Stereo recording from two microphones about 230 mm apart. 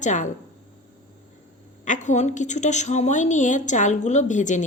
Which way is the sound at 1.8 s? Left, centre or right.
Left.